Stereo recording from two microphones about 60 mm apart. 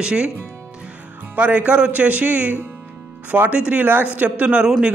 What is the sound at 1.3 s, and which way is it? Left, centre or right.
A man's voice, right.